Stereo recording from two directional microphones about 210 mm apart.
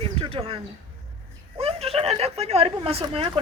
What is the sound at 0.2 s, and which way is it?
Speech, 25° right (ahead or behind).